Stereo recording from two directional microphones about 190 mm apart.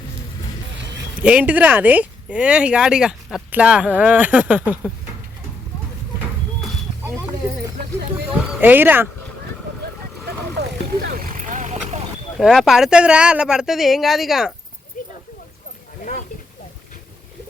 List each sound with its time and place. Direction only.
1.2 s speech: 5° right (ahead or behind)
8.6 s speech: 10° right (ahead or behind)
10.6 s vehicle: 60° right (ahead or behind)
11.2 s vehicle: 45° right (ahead or behind)
12.4 s speech: centre (ahead or behind)
15.0 s a sound: 40° left (ahead or behind)